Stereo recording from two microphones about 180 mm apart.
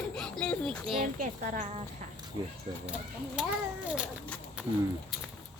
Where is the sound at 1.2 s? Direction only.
45° right (ahead or behind).